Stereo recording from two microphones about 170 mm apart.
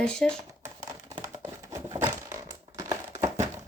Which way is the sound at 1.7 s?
15° right (ahead or behind).